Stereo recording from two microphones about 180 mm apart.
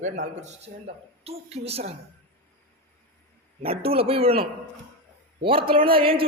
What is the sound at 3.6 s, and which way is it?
A man's voice, 30° right (ahead or behind).